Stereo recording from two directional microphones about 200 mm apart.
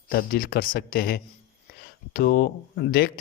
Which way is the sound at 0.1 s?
50° left (ahead or behind).